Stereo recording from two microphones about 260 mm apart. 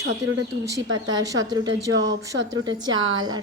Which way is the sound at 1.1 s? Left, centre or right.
Centre.